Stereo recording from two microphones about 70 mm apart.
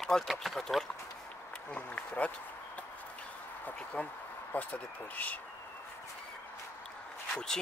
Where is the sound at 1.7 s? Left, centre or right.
Centre.